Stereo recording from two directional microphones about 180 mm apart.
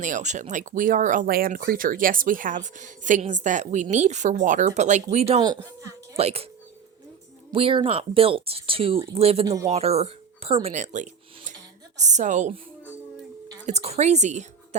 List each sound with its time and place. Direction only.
0.0 s speech: 45° right (ahead or behind)
5.4 s speech: 20° right (ahead or behind)
6.1 s speech: 35° right (ahead or behind)
7.5 s speech: 30° right (ahead or behind)
13.7 s a woman's voice: 35° right (ahead or behind)